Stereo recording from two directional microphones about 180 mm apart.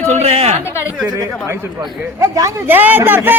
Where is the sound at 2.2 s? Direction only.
15° right (ahead or behind).